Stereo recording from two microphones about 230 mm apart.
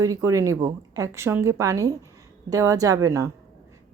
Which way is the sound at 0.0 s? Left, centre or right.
Centre.